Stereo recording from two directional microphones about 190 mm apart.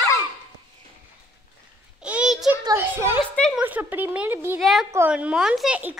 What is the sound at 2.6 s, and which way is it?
Speech, 15° right (ahead or behind).